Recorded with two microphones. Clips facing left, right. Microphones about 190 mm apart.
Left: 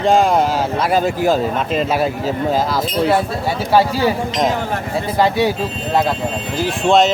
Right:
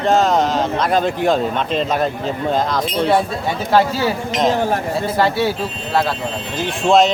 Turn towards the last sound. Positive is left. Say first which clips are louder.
# even
turn(degrees=0)  # may be behind; listen again after turning